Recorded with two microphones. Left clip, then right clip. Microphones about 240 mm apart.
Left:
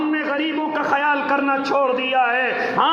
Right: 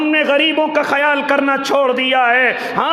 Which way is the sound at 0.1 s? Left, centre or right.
Right.